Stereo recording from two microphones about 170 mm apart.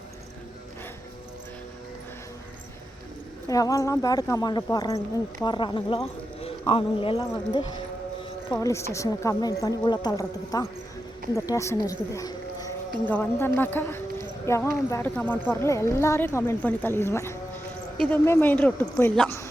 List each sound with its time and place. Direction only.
3.5 s a woman's voice: 20° left (ahead or behind)
8.4 s a woman's voice: 20° left (ahead or behind)